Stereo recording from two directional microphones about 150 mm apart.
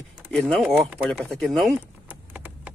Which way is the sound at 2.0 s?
10° right (ahead or behind).